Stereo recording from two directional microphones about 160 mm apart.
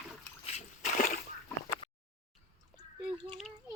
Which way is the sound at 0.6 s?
50° left (ahead or behind).